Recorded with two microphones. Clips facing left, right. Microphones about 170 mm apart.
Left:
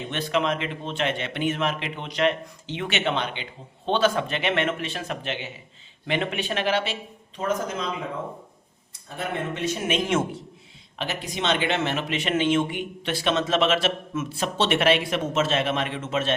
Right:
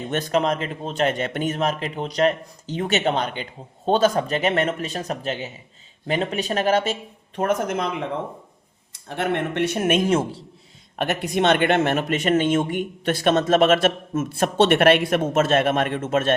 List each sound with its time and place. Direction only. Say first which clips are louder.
0.1 s speech: right 4 dB; 45° right (ahead or behind)
7.3 s speech: right 5 dB; 65° right (ahead or behind)
10.1 s speech: right 3 dB; 30° right (ahead or behind)
10.9 s speech: right 8 dB; 55° right (ahead or behind)